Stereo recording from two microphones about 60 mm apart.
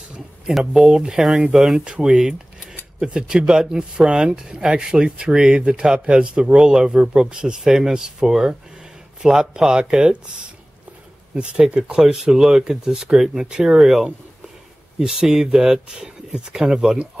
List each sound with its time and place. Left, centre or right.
0.5 s speech: centre
1.9 s speech: centre
11.3 s speech: centre